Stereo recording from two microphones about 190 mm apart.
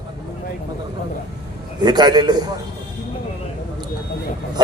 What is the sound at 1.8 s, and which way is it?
Speech, 20° right (ahead or behind).